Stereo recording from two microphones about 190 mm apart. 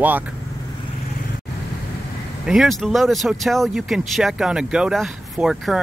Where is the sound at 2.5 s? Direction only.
Centre (ahead or behind).